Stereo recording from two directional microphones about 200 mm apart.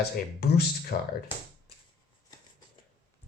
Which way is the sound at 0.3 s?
50° left (ahead or behind).